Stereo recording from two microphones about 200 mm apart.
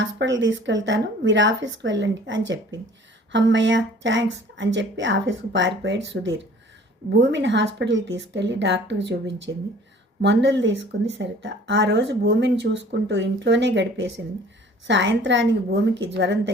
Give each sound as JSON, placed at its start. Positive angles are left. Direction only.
{"t": 0.0, "sound": "speech", "side_deg": -65}